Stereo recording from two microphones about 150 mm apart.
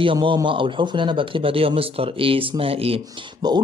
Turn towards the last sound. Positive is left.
turn(degrees=-30)  # may be behind; listen again after turning